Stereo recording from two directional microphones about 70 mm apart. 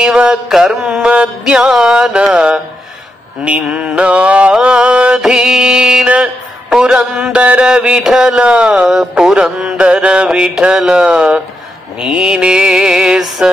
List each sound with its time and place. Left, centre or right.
0.0 s music: centre
0.5 s mantra: centre
1.0 s music: centre
8.8 s music: centre